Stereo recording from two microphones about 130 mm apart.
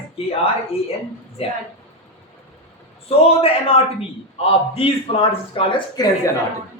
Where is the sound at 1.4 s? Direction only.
50° left (ahead or behind).